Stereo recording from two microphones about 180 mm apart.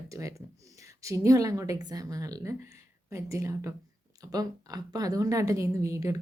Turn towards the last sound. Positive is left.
turn(degrees=-15)  # may be behind; listen again after turning